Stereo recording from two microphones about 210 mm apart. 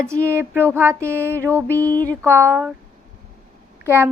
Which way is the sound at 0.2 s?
10° right (ahead or behind).